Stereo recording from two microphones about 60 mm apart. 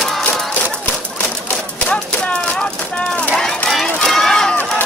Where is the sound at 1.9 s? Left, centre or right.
Left.